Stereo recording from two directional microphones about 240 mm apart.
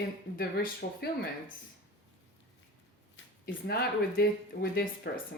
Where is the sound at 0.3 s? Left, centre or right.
Left.